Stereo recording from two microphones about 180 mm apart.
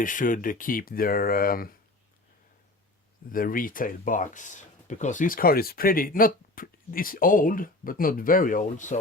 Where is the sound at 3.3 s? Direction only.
50° left (ahead or behind).